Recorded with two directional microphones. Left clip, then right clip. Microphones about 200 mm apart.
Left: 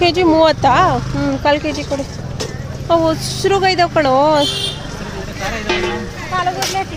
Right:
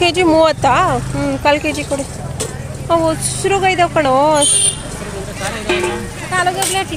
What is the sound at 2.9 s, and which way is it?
Speech, 15° left (ahead or behind).